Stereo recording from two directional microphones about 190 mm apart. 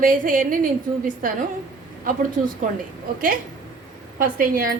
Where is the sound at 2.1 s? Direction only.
45° right (ahead or behind).